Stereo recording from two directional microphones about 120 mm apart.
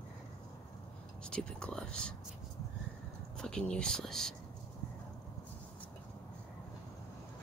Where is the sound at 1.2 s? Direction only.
5° left (ahead or behind).